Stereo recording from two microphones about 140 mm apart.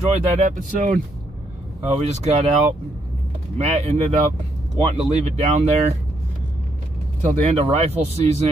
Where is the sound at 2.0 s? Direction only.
55° right (ahead or behind).